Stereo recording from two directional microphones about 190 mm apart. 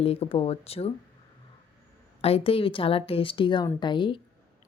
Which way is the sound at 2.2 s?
30° left (ahead or behind).